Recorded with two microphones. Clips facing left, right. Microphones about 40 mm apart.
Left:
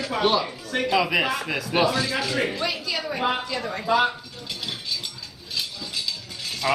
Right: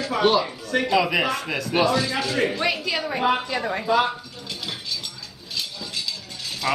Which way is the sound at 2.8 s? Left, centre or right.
Right.